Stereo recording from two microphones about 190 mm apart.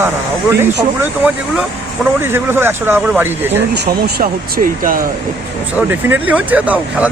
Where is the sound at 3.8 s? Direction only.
50° right (ahead or behind).